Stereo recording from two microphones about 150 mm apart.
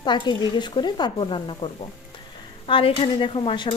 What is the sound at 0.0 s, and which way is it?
Speech, 30° left (ahead or behind).